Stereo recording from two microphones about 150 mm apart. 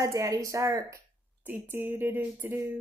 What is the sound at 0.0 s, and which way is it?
Speech, 20° right (ahead or behind).